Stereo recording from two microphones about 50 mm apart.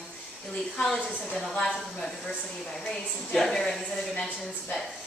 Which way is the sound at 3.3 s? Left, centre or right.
Centre.